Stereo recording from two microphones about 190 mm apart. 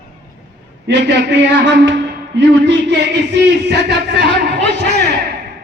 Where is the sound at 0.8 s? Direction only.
65° right (ahead or behind).